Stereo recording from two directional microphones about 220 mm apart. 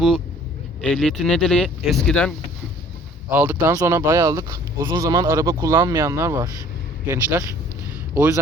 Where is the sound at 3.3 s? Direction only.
10° right (ahead or behind).